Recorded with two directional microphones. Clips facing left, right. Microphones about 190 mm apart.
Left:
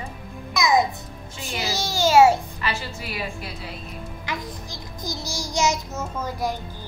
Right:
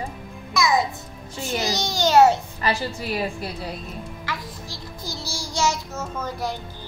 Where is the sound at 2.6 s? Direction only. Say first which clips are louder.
Right 5 dB; 40° right (ahead or behind).